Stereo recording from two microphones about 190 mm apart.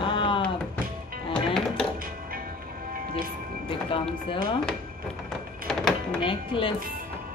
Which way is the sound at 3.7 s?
30° left (ahead or behind).